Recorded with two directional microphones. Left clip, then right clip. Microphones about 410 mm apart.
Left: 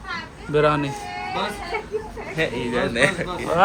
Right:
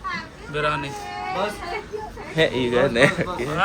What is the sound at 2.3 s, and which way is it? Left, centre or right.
Speech, centre.